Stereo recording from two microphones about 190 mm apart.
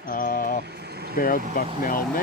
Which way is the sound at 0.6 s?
60° right (ahead or behind).